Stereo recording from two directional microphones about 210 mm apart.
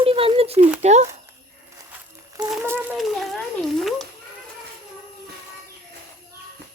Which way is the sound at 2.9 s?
Centre (ahead or behind).